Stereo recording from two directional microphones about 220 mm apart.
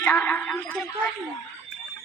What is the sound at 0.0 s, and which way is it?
Speech, 10° left (ahead or behind).